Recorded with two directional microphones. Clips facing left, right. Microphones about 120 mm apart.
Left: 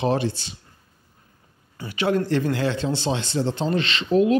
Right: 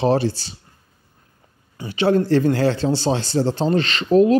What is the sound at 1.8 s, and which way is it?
A man's voice, 30° right (ahead or behind).